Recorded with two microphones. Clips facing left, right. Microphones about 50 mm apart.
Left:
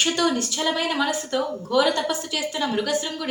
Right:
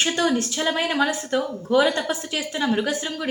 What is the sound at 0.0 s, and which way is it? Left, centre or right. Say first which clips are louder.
A woman's voice: right 1 dB; right.